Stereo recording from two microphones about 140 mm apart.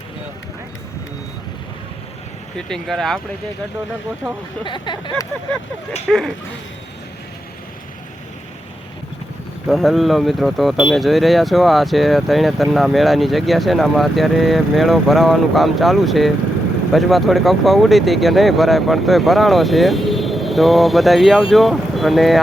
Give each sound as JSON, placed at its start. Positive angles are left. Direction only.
{"t": 2.6, "sound": "speech", "side_deg": 5}
{"t": 4.6, "sound": "speech", "side_deg": 35}
{"t": 6.1, "sound": "speech", "side_deg": 0}
{"t": 9.6, "sound": "speech", "side_deg": 0}